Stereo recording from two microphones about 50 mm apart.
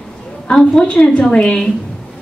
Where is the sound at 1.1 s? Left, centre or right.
Centre.